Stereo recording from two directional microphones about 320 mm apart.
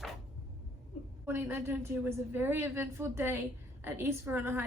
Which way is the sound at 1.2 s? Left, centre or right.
Centre.